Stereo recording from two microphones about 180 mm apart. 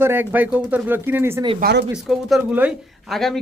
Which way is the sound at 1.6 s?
65° right (ahead or behind).